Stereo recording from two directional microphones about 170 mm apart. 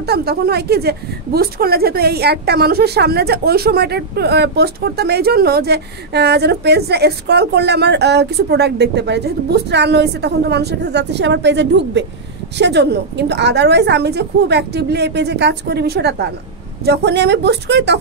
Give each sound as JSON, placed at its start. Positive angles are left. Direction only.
{"t": 0.0, "sound": "a woman's voice", "side_deg": -70}